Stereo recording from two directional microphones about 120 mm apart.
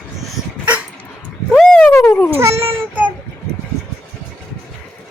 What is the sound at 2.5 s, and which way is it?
Child singing, 55° right (ahead or behind).